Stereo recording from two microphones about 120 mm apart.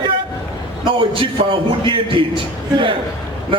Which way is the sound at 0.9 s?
45° right (ahead or behind).